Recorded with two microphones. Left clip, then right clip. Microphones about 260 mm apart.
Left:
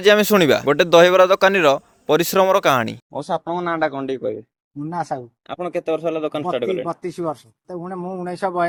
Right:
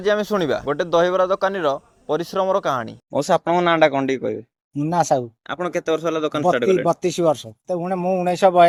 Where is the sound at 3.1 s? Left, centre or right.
Right.